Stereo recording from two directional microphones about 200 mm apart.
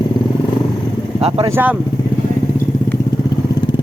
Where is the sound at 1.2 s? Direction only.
30° right (ahead or behind).